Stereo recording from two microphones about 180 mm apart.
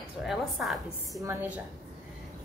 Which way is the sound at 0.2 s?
Centre (ahead or behind).